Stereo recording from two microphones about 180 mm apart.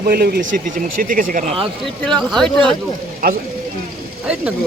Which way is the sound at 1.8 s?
Centre (ahead or behind).